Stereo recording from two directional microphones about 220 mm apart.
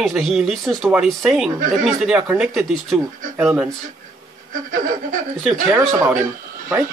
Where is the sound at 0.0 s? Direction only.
Centre (ahead or behind).